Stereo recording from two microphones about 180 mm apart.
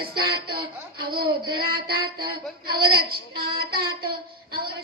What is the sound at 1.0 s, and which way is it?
Female singing, 60° right (ahead or behind).